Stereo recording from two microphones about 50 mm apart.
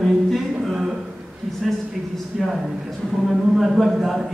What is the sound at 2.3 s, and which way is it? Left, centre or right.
A man's voice, centre.